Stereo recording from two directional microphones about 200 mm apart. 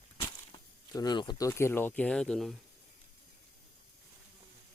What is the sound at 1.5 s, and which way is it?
Speech, 10° left (ahead or behind).